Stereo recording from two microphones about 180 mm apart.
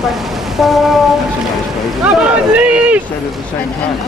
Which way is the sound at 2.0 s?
5° right (ahead or behind).